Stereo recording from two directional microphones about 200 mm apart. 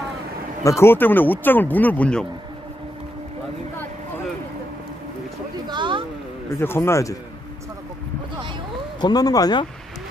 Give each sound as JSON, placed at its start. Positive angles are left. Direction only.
{"t": 0.7, "sound": "speech", "side_deg": 10}
{"t": 5.7, "sound": "a sound", "side_deg": -25}
{"t": 6.5, "sound": "speech", "side_deg": 10}
{"t": 9.0, "sound": "speech", "side_deg": 20}